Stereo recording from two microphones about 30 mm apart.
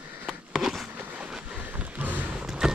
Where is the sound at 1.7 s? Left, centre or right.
Right.